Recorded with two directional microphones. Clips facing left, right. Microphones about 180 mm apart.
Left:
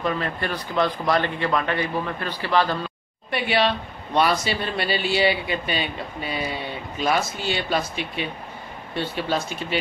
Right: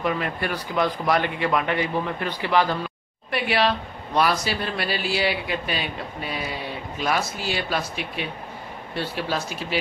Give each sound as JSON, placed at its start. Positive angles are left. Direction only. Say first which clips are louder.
{"t": 0.0, "sound": "speech", "louder": "even", "side_deg": -10}
{"t": 3.3, "sound": "speech", "louder": "even", "side_deg": 0}